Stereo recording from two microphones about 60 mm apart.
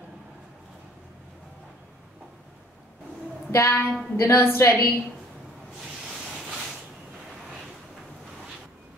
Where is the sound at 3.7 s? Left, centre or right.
Left.